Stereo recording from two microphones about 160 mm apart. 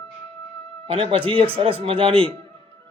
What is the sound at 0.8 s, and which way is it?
A man's voice, 35° right (ahead or behind).